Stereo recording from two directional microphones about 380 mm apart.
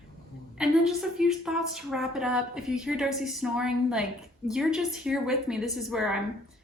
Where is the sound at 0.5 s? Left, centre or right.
Centre.